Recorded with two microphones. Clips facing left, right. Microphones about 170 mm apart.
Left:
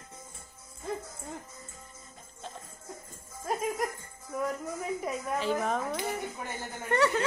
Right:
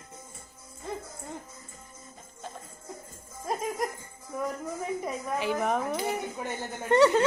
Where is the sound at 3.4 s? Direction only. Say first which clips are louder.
Even; centre (ahead or behind).